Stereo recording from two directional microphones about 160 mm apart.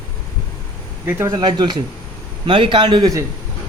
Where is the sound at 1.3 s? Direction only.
30° right (ahead or behind).